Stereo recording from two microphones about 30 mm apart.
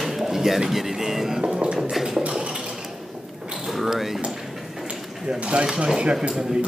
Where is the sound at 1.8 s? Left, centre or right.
Centre.